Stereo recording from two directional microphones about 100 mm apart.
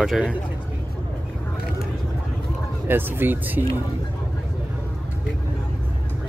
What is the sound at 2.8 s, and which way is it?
Speech, 20° right (ahead or behind).